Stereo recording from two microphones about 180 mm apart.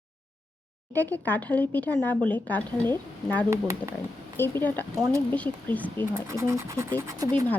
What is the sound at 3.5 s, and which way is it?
Speech, 15° right (ahead or behind).